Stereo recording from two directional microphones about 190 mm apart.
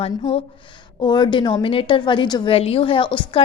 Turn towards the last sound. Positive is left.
turn(degrees=25)  # may be behind; listen again after turning